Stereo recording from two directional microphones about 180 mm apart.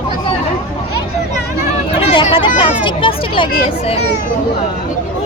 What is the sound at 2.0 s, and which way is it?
Speech, 25° left (ahead or behind).